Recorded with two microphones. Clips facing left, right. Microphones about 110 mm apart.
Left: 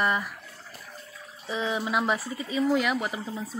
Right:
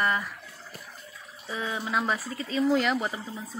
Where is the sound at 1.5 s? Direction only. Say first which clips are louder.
Left 3 dB; 20° left (ahead or behind).